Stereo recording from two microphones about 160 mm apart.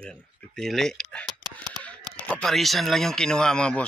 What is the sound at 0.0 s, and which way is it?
Speech, 5° left (ahead or behind).